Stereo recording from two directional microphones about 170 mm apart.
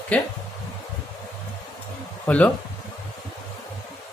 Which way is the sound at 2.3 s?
10° left (ahead or behind).